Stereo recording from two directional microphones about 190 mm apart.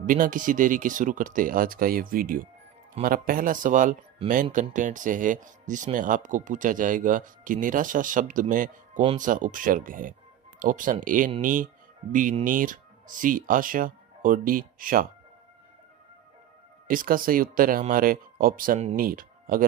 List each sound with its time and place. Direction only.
0.0 s speech: 45° right (ahead or behind)
16.9 s speech: 50° right (ahead or behind)